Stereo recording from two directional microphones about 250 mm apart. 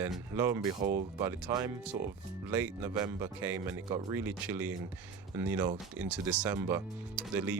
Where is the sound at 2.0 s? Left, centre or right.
Right.